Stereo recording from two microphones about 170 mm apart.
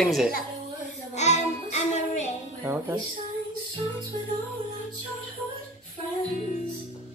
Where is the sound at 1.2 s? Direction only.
45° left (ahead or behind).